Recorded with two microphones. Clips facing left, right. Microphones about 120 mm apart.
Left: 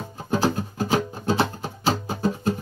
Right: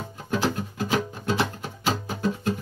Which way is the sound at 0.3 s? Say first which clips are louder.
Left 3 dB; 35° left (ahead or behind).